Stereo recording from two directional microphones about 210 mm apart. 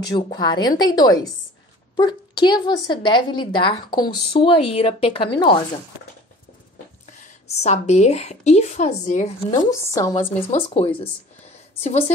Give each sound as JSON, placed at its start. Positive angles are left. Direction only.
{"t": 0.1, "sound": "a woman's voice", "side_deg": 20}
{"t": 7.1, "sound": "a woman's voice", "side_deg": 35}
{"t": 9.7, "sound": "a woman's voice", "side_deg": 15}
{"t": 10.5, "sound": "a woman's voice", "side_deg": 30}